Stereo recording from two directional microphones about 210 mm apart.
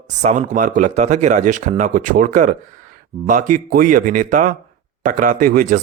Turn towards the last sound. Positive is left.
turn(degrees=-40)  # may be behind; listen again after turning